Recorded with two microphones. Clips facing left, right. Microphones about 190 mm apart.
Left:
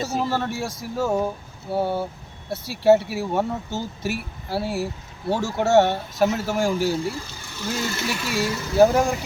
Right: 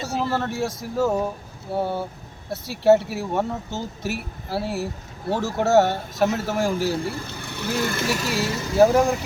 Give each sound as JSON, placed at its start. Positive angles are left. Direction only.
{"t": 0.2, "sound": "speech", "side_deg": 0}
{"t": 7.1, "sound": "speech", "side_deg": -60}
{"t": 8.3, "sound": "speech", "side_deg": 0}